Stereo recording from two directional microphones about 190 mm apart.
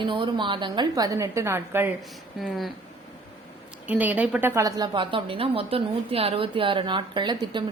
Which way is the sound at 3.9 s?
10° right (ahead or behind).